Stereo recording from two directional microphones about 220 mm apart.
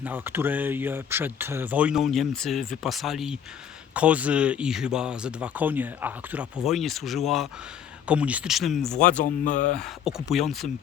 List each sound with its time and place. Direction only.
0.0 s speech: 10° right (ahead or behind)
9.0 s speech: 35° left (ahead or behind)
9.7 s speech: centre (ahead or behind)